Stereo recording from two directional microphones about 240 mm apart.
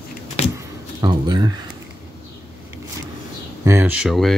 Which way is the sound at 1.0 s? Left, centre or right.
Centre.